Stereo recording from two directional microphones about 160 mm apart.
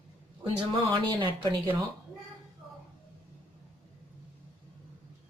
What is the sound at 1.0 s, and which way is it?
Speech, 30° right (ahead or behind).